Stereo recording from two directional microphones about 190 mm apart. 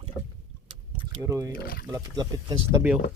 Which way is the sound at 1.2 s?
15° right (ahead or behind).